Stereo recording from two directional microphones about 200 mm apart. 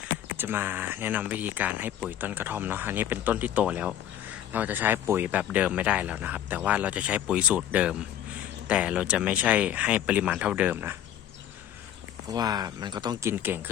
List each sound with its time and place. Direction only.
0.3 s speech: 10° right (ahead or behind)
12.3 s speech: 20° right (ahead or behind)
13.3 s speech: 10° right (ahead or behind)